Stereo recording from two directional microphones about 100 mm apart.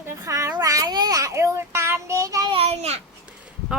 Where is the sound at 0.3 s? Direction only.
35° right (ahead or behind).